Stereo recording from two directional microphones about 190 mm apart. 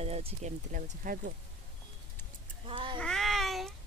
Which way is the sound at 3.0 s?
Centre (ahead or behind).